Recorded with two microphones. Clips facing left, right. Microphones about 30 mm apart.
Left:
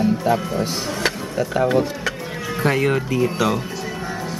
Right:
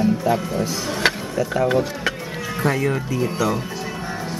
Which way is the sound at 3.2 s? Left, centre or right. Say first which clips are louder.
Left 2 dB; left.